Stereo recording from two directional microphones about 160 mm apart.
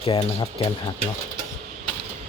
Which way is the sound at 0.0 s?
35° left (ahead or behind).